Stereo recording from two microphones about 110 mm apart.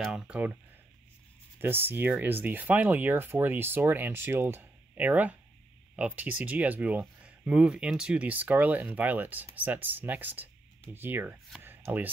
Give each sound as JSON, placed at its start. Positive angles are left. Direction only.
{"t": 0.0, "sound": "speech", "side_deg": -5}
{"t": 1.6, "sound": "speech", "side_deg": -20}
{"t": 11.6, "sound": "a sound", "side_deg": -20}